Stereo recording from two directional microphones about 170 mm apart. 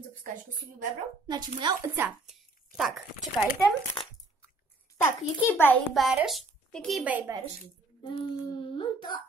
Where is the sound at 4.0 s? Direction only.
30° left (ahead or behind).